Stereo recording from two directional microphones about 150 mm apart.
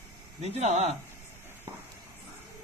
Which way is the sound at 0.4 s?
45° right (ahead or behind).